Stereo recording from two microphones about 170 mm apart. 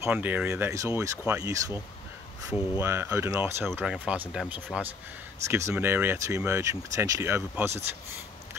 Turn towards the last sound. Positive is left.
turn(degrees=-15)  # may be behind; listen again after turning